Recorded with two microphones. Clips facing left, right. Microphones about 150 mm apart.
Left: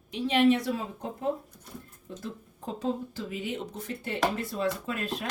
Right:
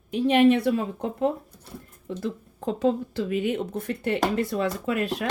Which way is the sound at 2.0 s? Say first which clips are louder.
Right 9 dB; 85° right.